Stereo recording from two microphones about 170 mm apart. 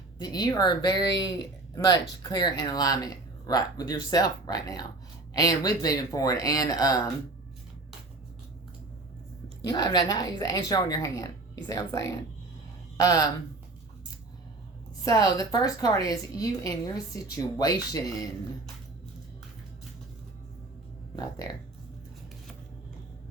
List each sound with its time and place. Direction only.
0.2 s speech: 25° left (ahead or behind)
9.6 s speech: 25° left (ahead or behind)
15.0 s speech: 20° left (ahead or behind)
21.2 s speech: 20° left (ahead or behind)